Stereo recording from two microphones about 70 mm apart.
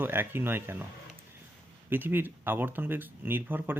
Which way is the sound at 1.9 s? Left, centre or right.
Right.